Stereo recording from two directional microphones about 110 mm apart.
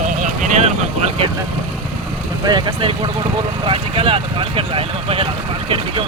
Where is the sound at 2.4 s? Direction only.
50° right (ahead or behind).